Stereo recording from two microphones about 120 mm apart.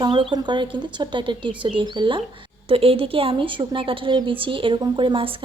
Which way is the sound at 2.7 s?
50° right (ahead or behind).